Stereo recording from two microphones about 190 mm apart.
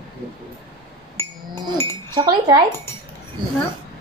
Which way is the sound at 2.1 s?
20° right (ahead or behind).